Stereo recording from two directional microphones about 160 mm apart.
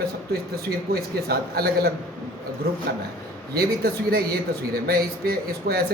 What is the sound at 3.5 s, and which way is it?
Speech, 70° right (ahead or behind).